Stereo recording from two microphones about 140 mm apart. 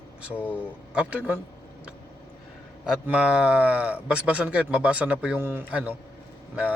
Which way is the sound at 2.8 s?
5° right (ahead or behind).